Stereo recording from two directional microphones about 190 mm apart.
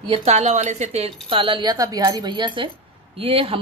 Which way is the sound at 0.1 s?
35° right (ahead or behind).